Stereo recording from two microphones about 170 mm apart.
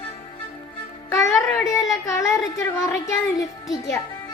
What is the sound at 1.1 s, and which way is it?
A child's voice, 20° left (ahead or behind).